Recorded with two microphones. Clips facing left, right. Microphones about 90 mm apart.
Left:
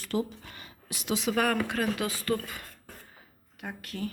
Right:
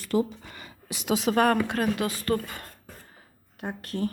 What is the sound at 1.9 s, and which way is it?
Speech, 20° left (ahead or behind).